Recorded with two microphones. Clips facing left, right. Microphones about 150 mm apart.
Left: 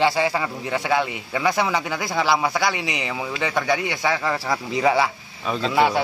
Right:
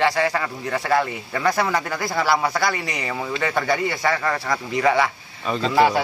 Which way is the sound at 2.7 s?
20° left (ahead or behind).